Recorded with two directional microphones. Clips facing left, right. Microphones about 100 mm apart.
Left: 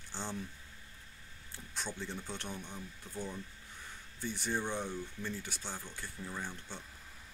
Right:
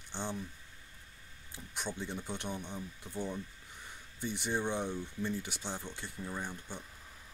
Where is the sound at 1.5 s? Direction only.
15° right (ahead or behind).